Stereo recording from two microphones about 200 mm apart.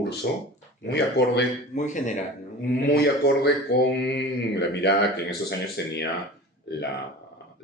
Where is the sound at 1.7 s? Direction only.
40° left (ahead or behind).